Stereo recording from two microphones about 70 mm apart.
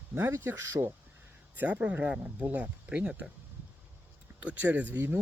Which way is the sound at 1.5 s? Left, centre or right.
Right.